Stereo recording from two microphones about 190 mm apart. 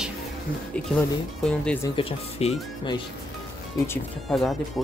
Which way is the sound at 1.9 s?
30° left (ahead or behind).